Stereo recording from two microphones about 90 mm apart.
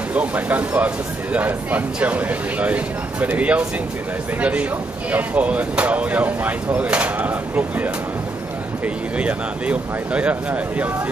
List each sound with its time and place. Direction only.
0.1 s speech: 15° right (ahead or behind)